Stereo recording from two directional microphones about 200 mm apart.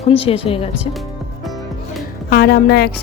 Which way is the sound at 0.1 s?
30° left (ahead or behind).